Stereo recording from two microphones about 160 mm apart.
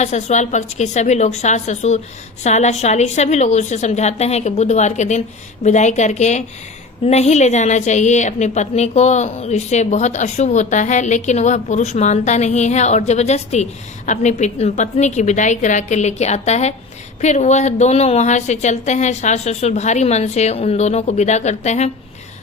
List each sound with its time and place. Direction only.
0.0 s a woman's voice: 45° left (ahead or behind)